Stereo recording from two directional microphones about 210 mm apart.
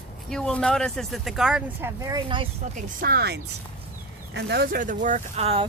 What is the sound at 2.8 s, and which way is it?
Speech, 45° right (ahead or behind).